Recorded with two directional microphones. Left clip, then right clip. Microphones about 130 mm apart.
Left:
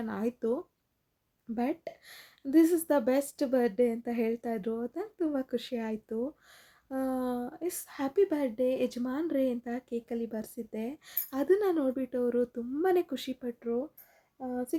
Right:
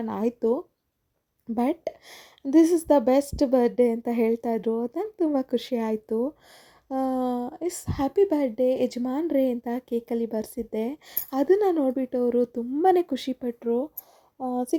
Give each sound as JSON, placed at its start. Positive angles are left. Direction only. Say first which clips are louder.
{"t": 0.0, "sound": "speech", "louder": "right 7 dB", "side_deg": -40}